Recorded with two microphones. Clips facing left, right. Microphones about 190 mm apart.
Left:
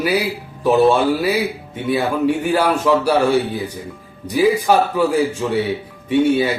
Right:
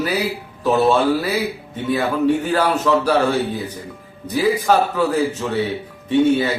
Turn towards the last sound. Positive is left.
turn(degrees=10)  # may be behind; listen again after turning